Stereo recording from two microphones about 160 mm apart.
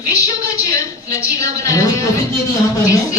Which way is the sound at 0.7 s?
20° left (ahead or behind).